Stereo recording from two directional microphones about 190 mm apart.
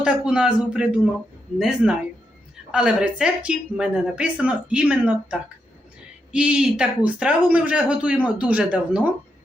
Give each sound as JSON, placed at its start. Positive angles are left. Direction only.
{"t": 0.0, "sound": "a man's voice", "side_deg": -5}